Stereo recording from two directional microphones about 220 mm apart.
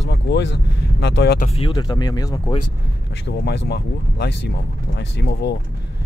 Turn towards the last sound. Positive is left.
turn(degrees=50)  # may be behind; listen again after turning